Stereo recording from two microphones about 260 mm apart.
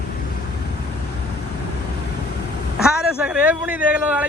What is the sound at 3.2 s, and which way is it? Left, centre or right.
Speech, centre.